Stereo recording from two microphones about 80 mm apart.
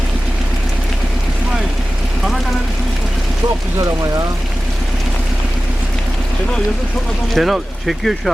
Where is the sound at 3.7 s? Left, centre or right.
Right.